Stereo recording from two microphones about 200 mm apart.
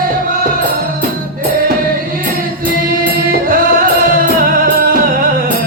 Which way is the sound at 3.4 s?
45° right (ahead or behind).